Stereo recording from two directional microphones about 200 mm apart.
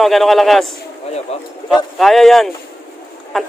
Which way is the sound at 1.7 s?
Centre (ahead or behind).